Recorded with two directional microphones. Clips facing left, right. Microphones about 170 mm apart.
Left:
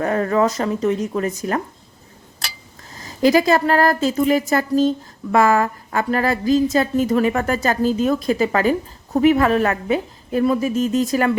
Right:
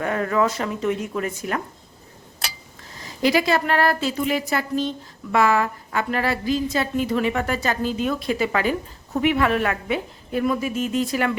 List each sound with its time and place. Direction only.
0.0 s a woman's voice: 35° left (ahead or behind)
3.0 s a woman's voice: 40° left (ahead or behind)